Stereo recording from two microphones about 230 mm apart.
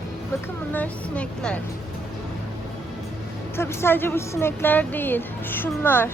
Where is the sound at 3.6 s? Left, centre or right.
Centre.